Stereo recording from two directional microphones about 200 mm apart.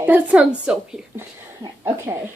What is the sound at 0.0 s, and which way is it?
A woman's voice, 10° right (ahead or behind).